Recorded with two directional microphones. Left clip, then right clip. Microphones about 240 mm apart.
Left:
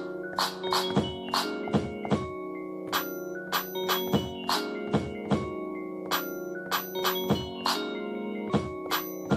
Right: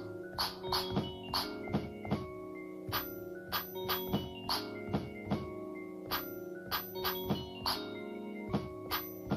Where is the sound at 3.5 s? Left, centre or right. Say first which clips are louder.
Left 8 dB; right.